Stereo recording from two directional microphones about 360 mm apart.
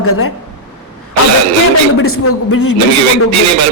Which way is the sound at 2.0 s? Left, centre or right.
Left.